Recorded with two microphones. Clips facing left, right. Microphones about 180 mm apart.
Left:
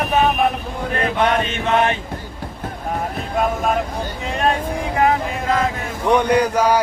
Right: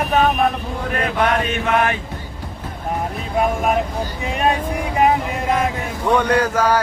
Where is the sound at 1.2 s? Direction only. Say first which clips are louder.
Even; 25° left (ahead or behind).